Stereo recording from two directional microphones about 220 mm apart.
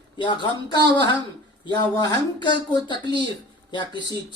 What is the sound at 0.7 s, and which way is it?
Speech, 20° left (ahead or behind).